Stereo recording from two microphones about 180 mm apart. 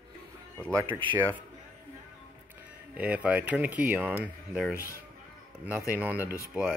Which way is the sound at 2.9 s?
10° right (ahead or behind).